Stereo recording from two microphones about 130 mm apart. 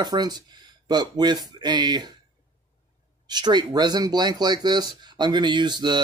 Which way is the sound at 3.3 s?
35° right (ahead or behind).